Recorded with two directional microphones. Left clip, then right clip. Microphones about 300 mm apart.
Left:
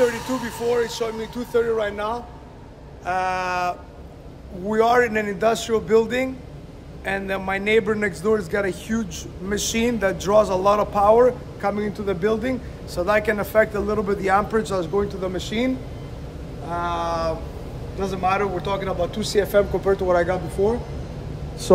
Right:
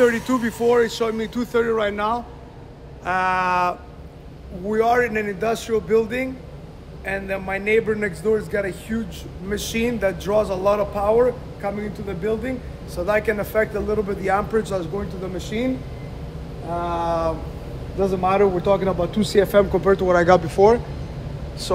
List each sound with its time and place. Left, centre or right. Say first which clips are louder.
0.2 s a man's voice: right 4 dB; centre
0.7 s a man's voice: right 4 dB; right
4.6 s a man's voice: left 1 dB; centre
16.7 s cat: right 1 dB; centre
18.0 s a man's voice: right 4 dB; centre; by 20.3 s right